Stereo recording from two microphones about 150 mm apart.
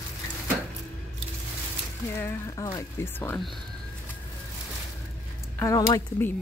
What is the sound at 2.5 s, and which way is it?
Speech, 20° left (ahead or behind).